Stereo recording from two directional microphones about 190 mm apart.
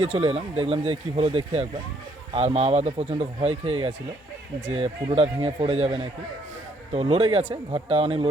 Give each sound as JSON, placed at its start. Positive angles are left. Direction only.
{"t": 0.0, "sound": "speech", "side_deg": -30}